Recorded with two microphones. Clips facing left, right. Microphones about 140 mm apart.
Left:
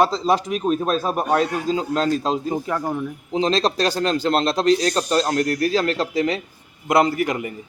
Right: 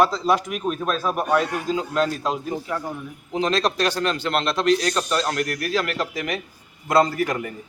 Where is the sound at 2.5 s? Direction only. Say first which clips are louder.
Left 5 dB; 50° left (ahead or behind).